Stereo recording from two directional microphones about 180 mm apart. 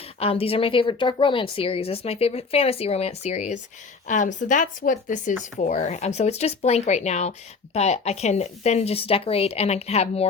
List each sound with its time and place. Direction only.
0.2 s speech: 35° left (ahead or behind)